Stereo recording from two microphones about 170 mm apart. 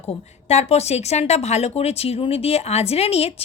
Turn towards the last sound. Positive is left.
turn(degrees=35)  # may be behind; listen again after turning